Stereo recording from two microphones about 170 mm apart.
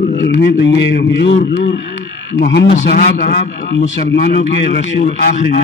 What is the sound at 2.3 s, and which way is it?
Speech, 90° left.